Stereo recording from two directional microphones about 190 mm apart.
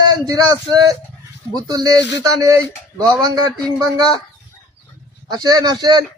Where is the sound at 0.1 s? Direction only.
20° right (ahead or behind).